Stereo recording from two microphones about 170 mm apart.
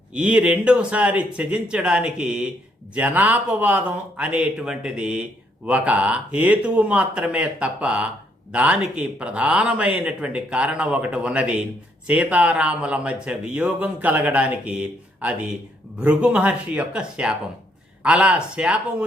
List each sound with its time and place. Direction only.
0.1 s speech: 5° right (ahead or behind)